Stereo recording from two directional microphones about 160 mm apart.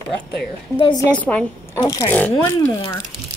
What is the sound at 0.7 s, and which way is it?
Speech, 30° left (ahead or behind).